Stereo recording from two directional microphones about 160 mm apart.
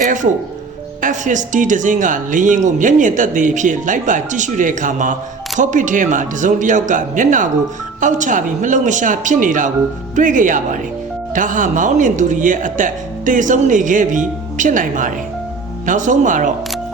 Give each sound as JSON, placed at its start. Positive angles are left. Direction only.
{"t": 1.0, "sound": "speech", "side_deg": -50}